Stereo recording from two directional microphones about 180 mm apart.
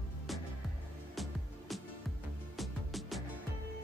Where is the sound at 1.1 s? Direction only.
Centre (ahead or behind).